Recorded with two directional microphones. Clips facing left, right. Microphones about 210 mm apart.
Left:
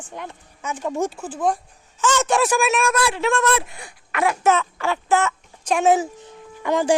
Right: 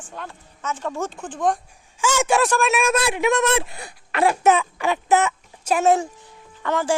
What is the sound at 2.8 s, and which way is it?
Speech, 25° right (ahead or behind).